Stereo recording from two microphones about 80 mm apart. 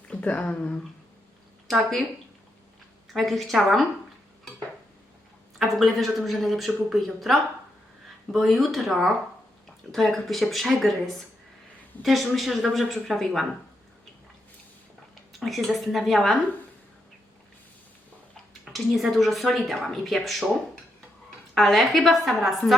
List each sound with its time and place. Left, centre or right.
0.1 s speech: centre
1.6 s speech: centre
3.1 s a woman's voice: centre
5.5 s a woman's voice: centre
15.3 s a woman's voice: centre
18.6 s a sound: centre
19.1 s a woman's voice: centre
21.5 s a woman's voice: centre